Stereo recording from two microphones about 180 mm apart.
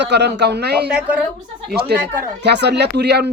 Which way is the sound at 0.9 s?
5° right (ahead or behind).